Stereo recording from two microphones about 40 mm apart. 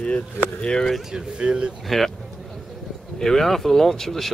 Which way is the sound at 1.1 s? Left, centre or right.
Right.